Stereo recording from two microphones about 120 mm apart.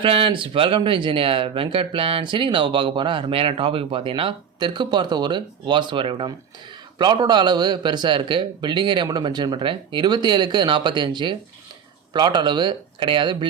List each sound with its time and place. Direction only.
0.0 s a man's voice: 50° right (ahead or behind)